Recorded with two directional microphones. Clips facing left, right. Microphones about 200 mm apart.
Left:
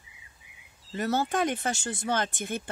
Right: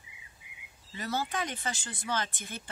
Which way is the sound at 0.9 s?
50° left (ahead or behind).